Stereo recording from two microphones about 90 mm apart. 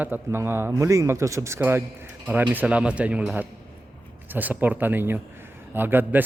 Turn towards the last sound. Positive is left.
turn(degrees=-20)  # may be behind; listen again after turning